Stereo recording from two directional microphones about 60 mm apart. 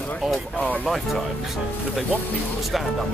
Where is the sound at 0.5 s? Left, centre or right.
Left.